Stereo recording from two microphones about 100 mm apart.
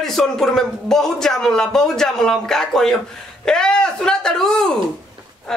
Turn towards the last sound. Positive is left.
turn(degrees=5)  # may be behind; listen again after turning